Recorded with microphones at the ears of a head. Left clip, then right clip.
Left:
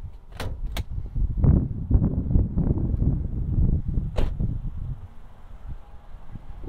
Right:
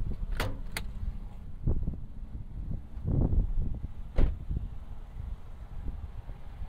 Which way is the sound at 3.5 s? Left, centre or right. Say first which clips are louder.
Left 14 dB; left.